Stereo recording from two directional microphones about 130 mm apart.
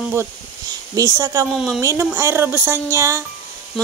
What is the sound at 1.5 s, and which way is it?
Speech, 5° left (ahead or behind).